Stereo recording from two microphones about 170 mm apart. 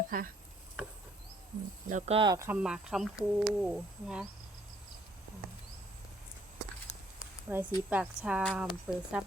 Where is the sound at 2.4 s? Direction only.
10° right (ahead or behind).